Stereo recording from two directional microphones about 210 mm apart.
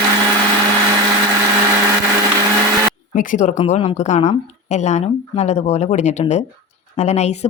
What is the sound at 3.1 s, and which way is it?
Speech, 35° left (ahead or behind).